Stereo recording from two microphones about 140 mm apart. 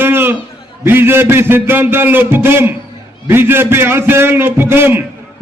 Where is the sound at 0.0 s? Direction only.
15° right (ahead or behind).